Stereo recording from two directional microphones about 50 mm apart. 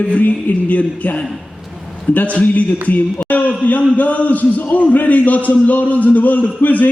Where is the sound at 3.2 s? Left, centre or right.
Left.